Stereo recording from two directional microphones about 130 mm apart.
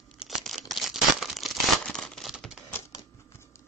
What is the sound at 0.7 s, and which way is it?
Crumpling, centre (ahead or behind).